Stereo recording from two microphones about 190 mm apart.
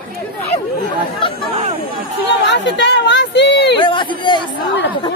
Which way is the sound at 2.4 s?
65° left (ahead or behind).